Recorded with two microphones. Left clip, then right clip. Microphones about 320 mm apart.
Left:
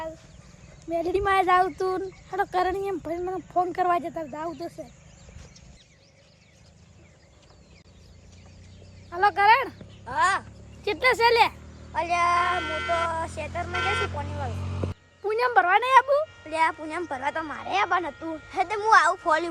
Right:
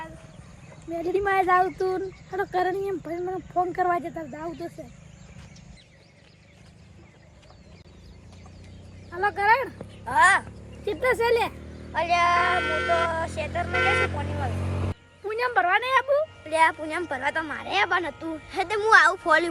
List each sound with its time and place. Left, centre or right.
0.9 s speech: centre
9.1 s speech: centre
11.9 s music: centre